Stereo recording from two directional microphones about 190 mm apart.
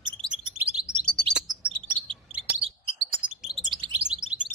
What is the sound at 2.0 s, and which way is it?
Chirp, 25° right (ahead or behind).